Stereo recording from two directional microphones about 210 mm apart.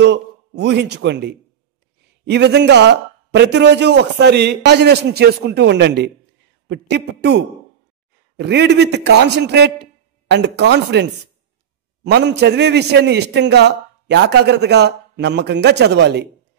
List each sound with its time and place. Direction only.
0.0 s a man's voice: 55° right (ahead or behind)